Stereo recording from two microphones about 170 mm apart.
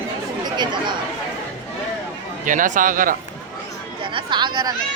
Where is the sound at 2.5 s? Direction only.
50° right (ahead or behind).